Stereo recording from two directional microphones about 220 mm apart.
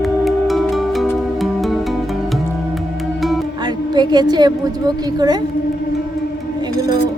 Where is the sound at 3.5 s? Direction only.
20° right (ahead or behind).